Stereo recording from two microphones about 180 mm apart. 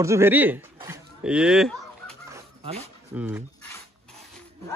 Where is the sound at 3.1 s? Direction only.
5° right (ahead or behind).